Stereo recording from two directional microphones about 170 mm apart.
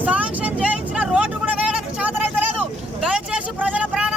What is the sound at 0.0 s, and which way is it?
Vehicle, 10° right (ahead or behind).